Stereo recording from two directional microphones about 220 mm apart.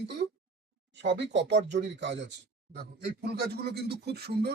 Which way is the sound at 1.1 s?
50° right (ahead or behind).